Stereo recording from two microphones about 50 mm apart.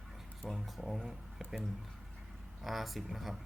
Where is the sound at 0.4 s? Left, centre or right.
Centre.